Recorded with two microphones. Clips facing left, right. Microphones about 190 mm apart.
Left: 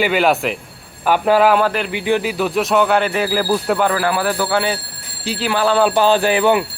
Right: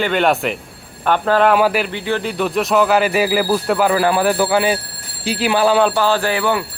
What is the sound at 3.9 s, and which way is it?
Speech, 20° right (ahead or behind).